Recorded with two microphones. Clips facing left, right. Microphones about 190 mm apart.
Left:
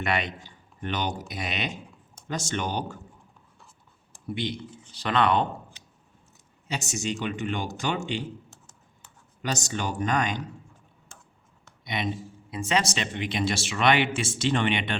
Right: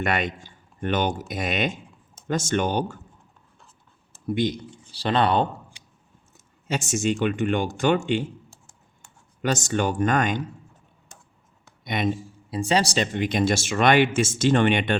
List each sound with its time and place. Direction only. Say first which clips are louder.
0.0 s speech: right 3 dB; 50° right (ahead or behind)
4.4 s speech: right 7 dB; 45° right (ahead or behind)
4.9 s speech: right 2 dB; 30° right (ahead or behind)
5.7 s a sound: even; 15° right (ahead or behind)
6.7 s speech: right 7 dB; 50° right (ahead or behind)
9.4 s speech: right 7 dB; 55° right (ahead or behind)
11.9 s speech: right 5 dB; 50° right (ahead or behind)
12.5 s speech: right 4 dB; 35° right (ahead or behind)